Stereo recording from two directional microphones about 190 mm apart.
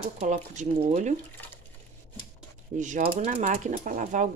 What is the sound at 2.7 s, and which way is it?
Speech, 40° right (ahead or behind).